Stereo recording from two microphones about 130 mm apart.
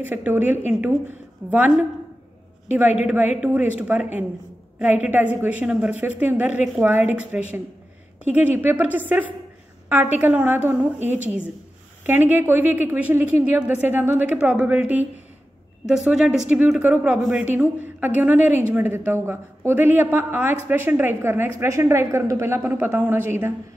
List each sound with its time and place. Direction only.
0.0 s a woman's voice: 15° right (ahead or behind)
3.1 s a woman's voice: 15° right (ahead or behind)